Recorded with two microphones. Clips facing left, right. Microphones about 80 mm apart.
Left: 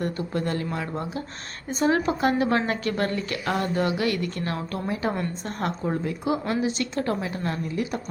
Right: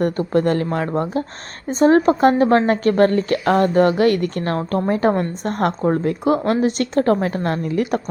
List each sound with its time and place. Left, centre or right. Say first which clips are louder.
0.0 s a woman's voice: right 10 dB; right
1.6 s a woman's voice: right 9 dB; right